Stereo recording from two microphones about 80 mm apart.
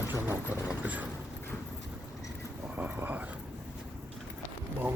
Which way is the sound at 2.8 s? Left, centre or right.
Right.